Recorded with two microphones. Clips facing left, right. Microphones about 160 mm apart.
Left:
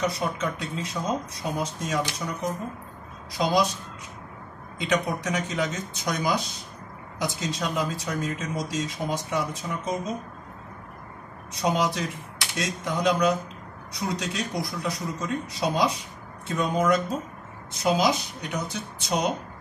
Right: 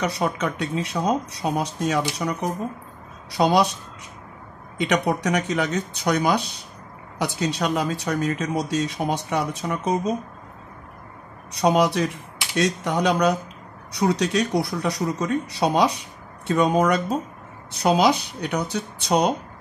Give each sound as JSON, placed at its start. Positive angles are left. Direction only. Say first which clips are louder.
{"t": 0.0, "sound": "speech", "louder": "right 3 dB", "side_deg": -70}
{"t": 4.7, "sound": "speech", "louder": "right 4 dB", "side_deg": -70}
{"t": 11.5, "sound": "speech", "louder": "right 6 dB", "side_deg": -65}